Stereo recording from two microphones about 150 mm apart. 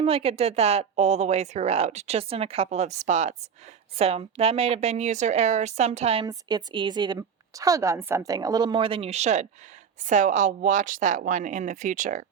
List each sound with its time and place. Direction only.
0.0 s a woman's voice: 40° right (ahead or behind)
6.2 s a woman's voice: 30° right (ahead or behind); by 12.2 s 60° right (ahead or behind)